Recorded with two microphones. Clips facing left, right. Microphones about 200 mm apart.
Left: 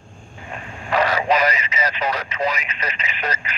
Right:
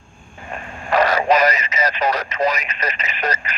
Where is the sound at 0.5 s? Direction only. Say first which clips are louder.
Right 3 dB; 50° right (ahead or behind).